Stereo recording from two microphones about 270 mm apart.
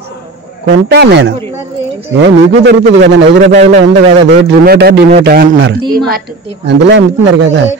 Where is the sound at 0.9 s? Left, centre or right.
Right.